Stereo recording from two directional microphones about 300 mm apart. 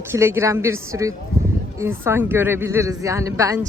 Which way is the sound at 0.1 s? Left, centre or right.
Centre.